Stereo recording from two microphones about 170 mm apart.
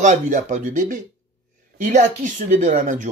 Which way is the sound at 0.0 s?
45° right (ahead or behind).